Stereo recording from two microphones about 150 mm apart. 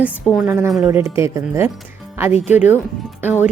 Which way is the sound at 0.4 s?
15° right (ahead or behind).